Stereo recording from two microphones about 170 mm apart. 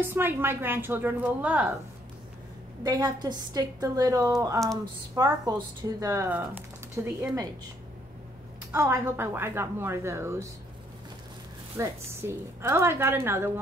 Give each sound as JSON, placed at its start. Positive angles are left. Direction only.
{"t": 0.0, "sound": "a woman's voice", "side_deg": -10}
{"t": 2.8, "sound": "a woman's voice", "side_deg": -25}
{"t": 8.7, "sound": "a woman's voice", "side_deg": -15}
{"t": 11.7, "sound": "a woman's voice", "side_deg": -15}